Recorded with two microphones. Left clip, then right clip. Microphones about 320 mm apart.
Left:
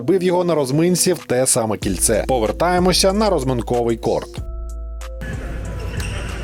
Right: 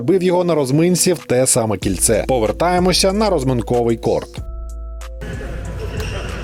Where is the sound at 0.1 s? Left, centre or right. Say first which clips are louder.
Right 2 dB; centre.